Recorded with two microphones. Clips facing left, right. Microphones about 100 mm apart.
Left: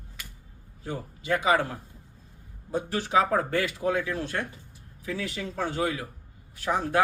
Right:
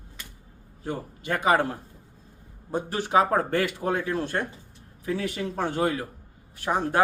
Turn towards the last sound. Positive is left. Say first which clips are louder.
# right 1 dB
turn(degrees=-40)  # may be behind; listen again after turning